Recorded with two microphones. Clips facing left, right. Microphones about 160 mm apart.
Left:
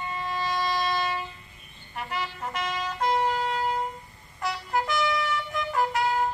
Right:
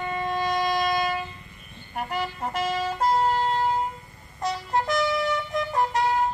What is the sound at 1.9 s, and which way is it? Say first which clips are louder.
Vehicle: right 4 dB; 45° right (ahead or behind).